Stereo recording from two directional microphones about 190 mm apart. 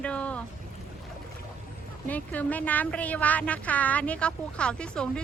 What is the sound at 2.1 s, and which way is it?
A woman's voice, 10° left (ahead or behind).